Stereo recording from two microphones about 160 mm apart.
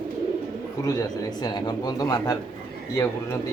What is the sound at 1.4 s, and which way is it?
Speech, 25° left (ahead or behind).